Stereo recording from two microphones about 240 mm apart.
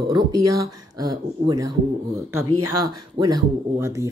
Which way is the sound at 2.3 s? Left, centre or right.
Right.